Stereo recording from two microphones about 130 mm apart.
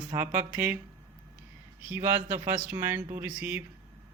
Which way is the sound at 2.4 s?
15° right (ahead or behind).